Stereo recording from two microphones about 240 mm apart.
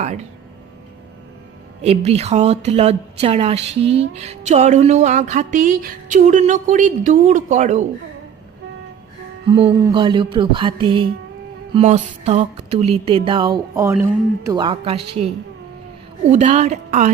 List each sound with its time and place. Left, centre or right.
0.0 s a woman's voice: right
1.8 s a woman's voice: right
4.1 s a sound: right
9.5 s a woman's voice: right